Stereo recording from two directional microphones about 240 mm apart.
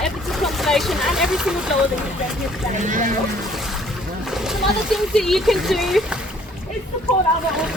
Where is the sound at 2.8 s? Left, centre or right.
Right.